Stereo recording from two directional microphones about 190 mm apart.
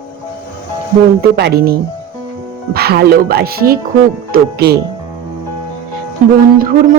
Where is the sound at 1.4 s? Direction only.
55° right (ahead or behind).